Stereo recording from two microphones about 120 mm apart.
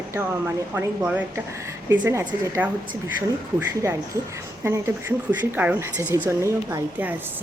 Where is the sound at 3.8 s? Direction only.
25° right (ahead or behind).